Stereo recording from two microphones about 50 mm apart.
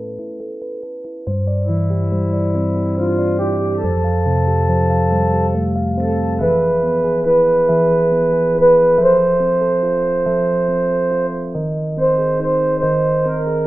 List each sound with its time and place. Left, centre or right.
2.1 s music: centre
3.3 s organ: centre
5.8 s music: centre
7.9 s music: centre
9.8 s music: centre
12.0 s music: centre